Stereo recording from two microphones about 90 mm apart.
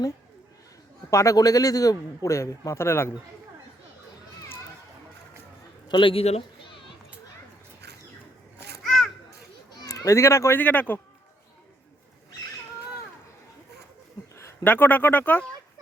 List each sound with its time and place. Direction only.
1.1 s a man's voice: 35° left (ahead or behind)
5.9 s a man's voice: 70° left (ahead or behind)
8.8 s children playing: centre (ahead or behind)
9.8 s speech: 40° left (ahead or behind)
10.6 s speech: 20° left (ahead or behind)
14.3 s a sound: 30° left (ahead or behind)
14.7 s speech: 20° left (ahead or behind)